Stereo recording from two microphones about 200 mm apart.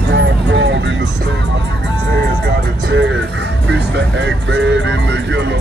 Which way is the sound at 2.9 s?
65° right (ahead or behind).